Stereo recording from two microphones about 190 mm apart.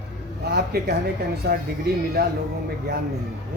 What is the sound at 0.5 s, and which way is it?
Speech, 55° right (ahead or behind).